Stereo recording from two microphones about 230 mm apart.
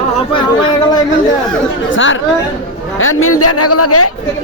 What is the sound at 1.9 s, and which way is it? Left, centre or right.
A man's voice, left.